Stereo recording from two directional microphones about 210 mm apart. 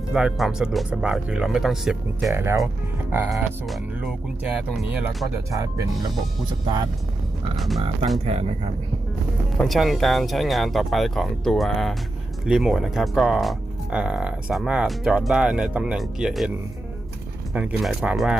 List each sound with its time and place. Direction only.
0.1 s speech: 5° right (ahead or behind)
5.5 s speech: 15° right (ahead or behind)
7.5 s speech: centre (ahead or behind)
8.2 s speech: 30° right (ahead or behind)
9.6 s speech: centre (ahead or behind)
17.5 s speech: 5° right (ahead or behind)